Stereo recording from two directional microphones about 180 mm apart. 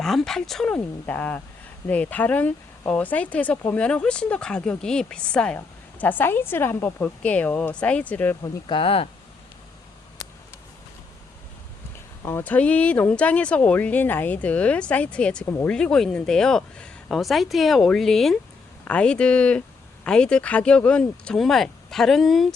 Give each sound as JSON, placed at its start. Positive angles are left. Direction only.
{"t": 0.0, "sound": "speech", "side_deg": 0}
{"t": 8.4, "sound": "speech", "side_deg": 25}
{"t": 12.2, "sound": "speech", "side_deg": 10}